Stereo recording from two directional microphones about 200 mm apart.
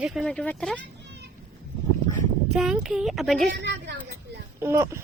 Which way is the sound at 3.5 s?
60° right (ahead or behind).